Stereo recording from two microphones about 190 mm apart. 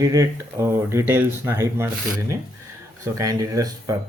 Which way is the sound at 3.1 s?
15° right (ahead or behind).